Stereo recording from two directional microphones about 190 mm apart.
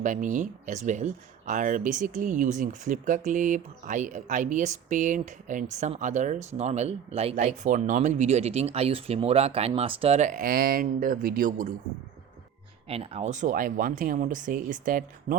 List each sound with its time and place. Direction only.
0.0 s speech: 40° right (ahead or behind)
12.9 s speech: 30° right (ahead or behind)